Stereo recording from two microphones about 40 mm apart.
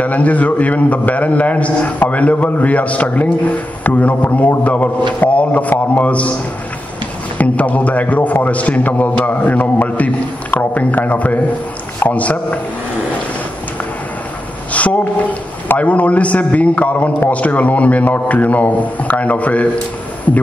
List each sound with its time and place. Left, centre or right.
0.0 s a man's voice: left
7.3 s a man's voice: left
14.7 s a sound: left
15.8 s a man's voice: left